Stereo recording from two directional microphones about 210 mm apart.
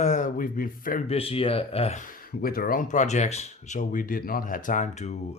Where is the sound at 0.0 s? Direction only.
35° left (ahead or behind).